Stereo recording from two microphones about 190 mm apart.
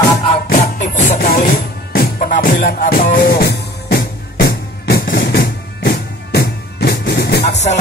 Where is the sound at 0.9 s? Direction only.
50° left (ahead or behind).